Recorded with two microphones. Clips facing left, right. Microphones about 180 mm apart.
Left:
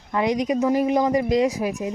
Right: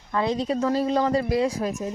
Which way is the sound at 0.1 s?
15° left (ahead or behind).